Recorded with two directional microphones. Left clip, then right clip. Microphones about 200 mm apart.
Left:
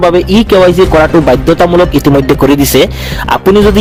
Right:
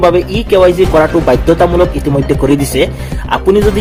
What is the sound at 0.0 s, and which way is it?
Speech, 45° left (ahead or behind).